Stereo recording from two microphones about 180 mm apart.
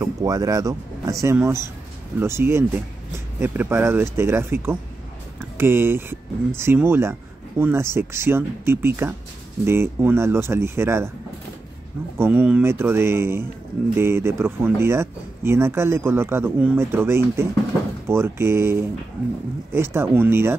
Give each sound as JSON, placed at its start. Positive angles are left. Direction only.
{"t": 0.0, "sound": "speech", "side_deg": -20}
{"t": 12.2, "sound": "speech", "side_deg": -10}